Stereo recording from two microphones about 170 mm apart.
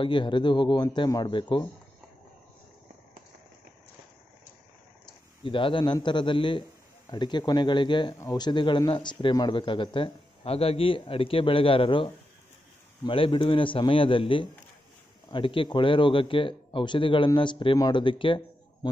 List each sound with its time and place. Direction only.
0.0 s a man's voice: 30° left (ahead or behind)
5.4 s a man's voice: 30° left (ahead or behind)